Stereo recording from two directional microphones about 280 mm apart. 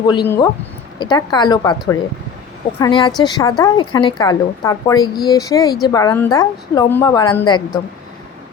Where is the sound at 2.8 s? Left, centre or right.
Centre.